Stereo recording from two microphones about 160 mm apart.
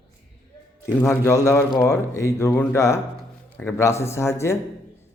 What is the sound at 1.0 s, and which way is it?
A man's voice, 15° left (ahead or behind).